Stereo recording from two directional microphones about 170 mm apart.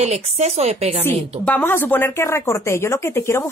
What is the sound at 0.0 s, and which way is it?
Speech, 40° right (ahead or behind).